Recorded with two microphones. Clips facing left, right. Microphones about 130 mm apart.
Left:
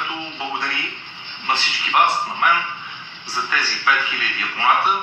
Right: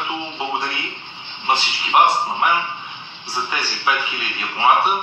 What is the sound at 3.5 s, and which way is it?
A man's voice, 25° right (ahead or behind).